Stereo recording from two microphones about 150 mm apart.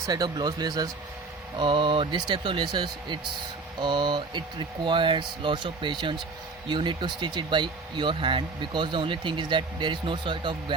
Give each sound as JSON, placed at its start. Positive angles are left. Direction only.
{"t": 0.1, "sound": "speech", "side_deg": -30}